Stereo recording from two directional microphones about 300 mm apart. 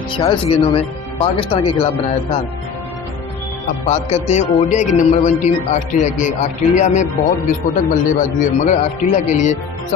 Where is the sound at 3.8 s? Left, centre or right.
Left.